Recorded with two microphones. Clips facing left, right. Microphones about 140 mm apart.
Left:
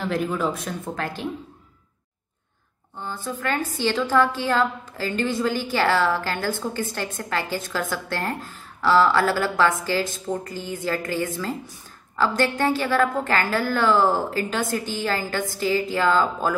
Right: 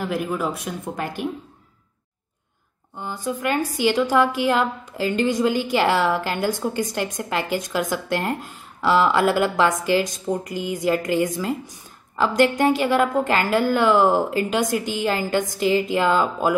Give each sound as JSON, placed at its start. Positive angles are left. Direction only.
{"t": 0.0, "sound": "a woman's voice", "side_deg": -10}
{"t": 3.0, "sound": "a woman's voice", "side_deg": -15}